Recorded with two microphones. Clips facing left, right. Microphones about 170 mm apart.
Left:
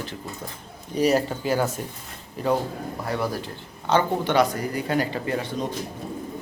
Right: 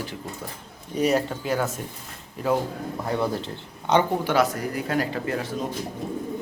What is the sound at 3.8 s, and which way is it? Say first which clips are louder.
Speech: even; 15° right (ahead or behind).